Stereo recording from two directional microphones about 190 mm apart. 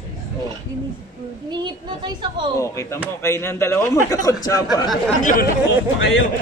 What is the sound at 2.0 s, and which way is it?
Speech, 25° right (ahead or behind).